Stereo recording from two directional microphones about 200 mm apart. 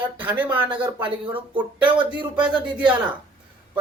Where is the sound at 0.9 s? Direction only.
25° right (ahead or behind).